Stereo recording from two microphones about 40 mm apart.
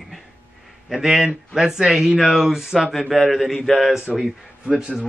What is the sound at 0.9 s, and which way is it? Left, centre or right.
A man's voice, centre.